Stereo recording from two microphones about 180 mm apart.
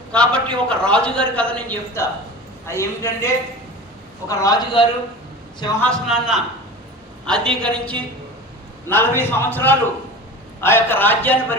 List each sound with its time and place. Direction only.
0.1 s a man's voice: 5° left (ahead or behind); by 4.9 s 25° left (ahead or behind)
5.8 s a man's voice: centre (ahead or behind)